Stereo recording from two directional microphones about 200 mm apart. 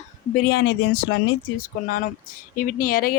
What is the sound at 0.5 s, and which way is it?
Speech, 60° left (ahead or behind).